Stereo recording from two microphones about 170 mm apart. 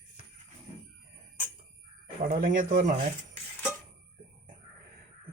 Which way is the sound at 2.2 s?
50° right (ahead or behind).